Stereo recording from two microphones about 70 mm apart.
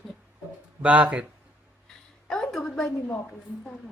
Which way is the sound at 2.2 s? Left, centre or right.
Centre.